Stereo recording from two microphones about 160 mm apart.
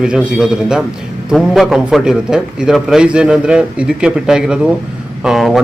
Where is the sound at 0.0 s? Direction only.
5° right (ahead or behind).